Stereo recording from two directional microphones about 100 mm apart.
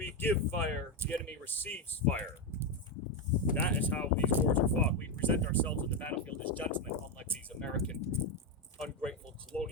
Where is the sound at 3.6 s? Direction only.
15° left (ahead or behind).